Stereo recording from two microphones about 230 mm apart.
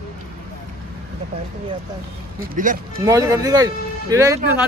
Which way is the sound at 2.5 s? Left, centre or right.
Right.